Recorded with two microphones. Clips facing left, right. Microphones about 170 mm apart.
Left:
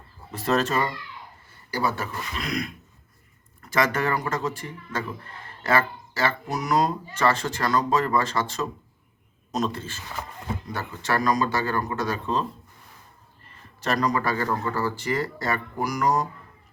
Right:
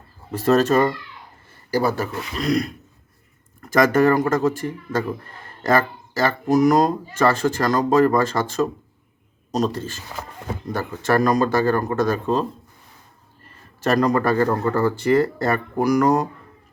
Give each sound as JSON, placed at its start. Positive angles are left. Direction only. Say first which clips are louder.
{"t": 0.3, "sound": "speech", "louder": "right 7 dB", "side_deg": -45}
{"t": 13.8, "sound": "speech", "louder": "right 6 dB", "side_deg": -50}